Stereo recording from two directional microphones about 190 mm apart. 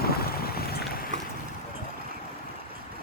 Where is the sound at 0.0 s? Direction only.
55° left (ahead or behind).